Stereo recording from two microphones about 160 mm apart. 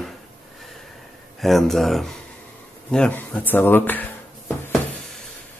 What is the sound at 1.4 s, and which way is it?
Speech, centre (ahead or behind).